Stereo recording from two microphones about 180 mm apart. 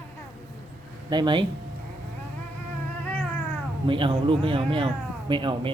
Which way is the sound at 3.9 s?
30° right (ahead or behind).